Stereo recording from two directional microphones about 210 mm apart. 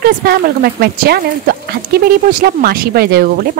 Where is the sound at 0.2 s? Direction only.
50° right (ahead or behind).